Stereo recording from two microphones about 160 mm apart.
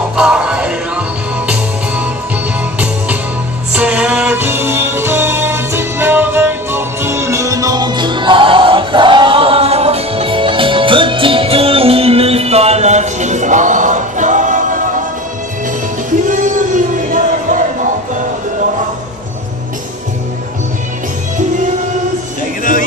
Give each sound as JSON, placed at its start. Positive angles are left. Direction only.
{"t": 0.1, "sound": "music", "side_deg": -5}
{"t": 3.7, "sound": "music", "side_deg": -5}
{"t": 16.3, "sound": "music", "side_deg": -55}